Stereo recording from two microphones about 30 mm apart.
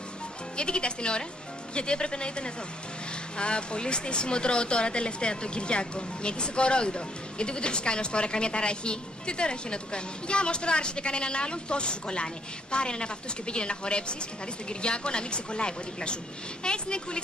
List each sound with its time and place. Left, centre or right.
0.6 s speech: left